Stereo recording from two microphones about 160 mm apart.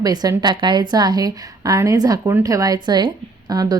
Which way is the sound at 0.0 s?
25° right (ahead or behind).